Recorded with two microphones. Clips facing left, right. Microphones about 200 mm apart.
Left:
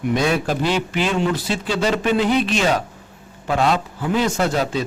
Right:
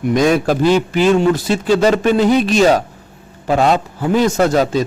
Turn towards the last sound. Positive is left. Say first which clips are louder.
# right 6 dB
turn(degrees=-40)  # may be behind; listen again after turning